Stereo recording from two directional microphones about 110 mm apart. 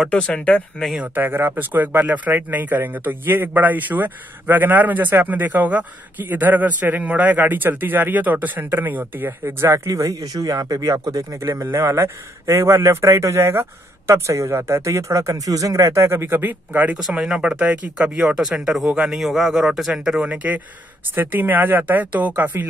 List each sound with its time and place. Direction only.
0.1 s speech: 10° left (ahead or behind)
0.9 s speech: 15° right (ahead or behind)
9.8 s speech: 30° right (ahead or behind); by 22.7 s 15° right (ahead or behind)